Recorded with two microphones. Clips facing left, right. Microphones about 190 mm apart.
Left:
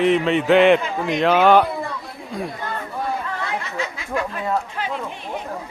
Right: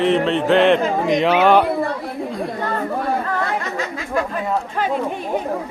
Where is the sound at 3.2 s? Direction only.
50° right (ahead or behind).